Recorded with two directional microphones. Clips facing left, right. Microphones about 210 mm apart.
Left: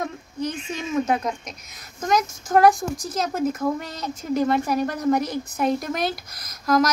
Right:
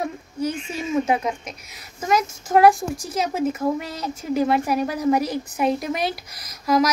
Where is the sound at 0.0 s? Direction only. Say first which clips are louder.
Right 2 dB; 10° right (ahead or behind).